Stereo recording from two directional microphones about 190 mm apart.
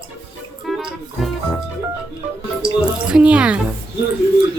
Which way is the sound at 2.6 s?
25° right (ahead or behind).